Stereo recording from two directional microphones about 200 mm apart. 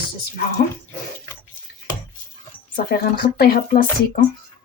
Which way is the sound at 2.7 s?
50° left (ahead or behind).